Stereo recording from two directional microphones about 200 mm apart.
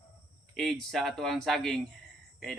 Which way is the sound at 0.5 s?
Centre (ahead or behind).